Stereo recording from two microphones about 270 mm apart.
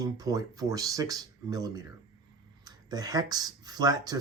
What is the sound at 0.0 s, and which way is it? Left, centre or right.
Speech, centre.